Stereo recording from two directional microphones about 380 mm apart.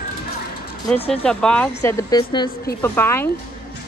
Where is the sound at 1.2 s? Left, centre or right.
Centre.